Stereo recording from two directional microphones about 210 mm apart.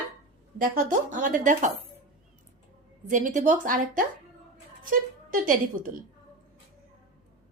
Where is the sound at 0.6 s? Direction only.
40° right (ahead or behind).